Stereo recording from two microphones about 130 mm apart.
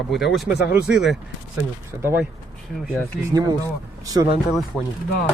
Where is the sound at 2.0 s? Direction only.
15° right (ahead or behind).